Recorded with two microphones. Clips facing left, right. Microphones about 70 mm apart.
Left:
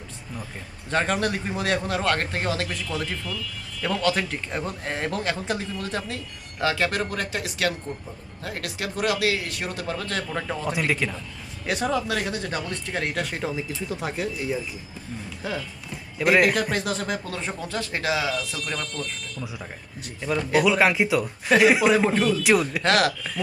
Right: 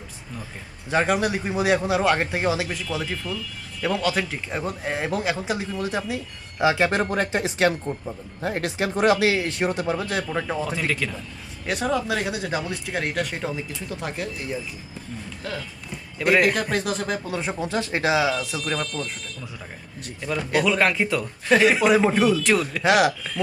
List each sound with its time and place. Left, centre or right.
0.9 s speech: centre; by 7.7 s right
7.9 s speech: centre
8.4 s speech: right; by 10.7 s centre
10.7 s speech: centre
11.6 s speech: centre
15.4 s speech: centre
16.1 s speech: centre
20.5 s speech: centre
22.1 s speech: centre
22.4 s speech: centre
22.8 s speech: centre